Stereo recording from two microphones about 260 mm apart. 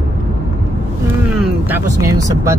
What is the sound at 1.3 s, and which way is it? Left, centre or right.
Vehicle, centre.